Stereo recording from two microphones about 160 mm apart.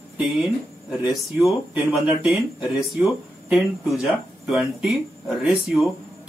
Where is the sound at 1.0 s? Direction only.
5° right (ahead or behind).